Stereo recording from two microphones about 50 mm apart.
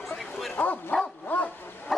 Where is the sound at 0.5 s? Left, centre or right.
Left.